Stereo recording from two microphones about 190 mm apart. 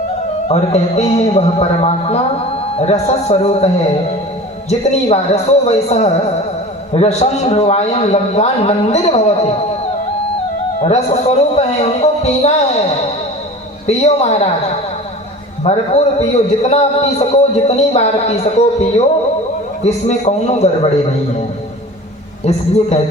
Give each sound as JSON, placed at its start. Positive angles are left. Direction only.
{"t": 0.4, "sound": "a man's voice", "side_deg": 35}
{"t": 4.9, "sound": "a man's voice", "side_deg": 35}
{"t": 10.8, "sound": "a man's voice", "side_deg": 35}
{"t": 13.8, "sound": "a man's voice", "side_deg": 35}
{"t": 22.4, "sound": "a man's voice", "side_deg": 35}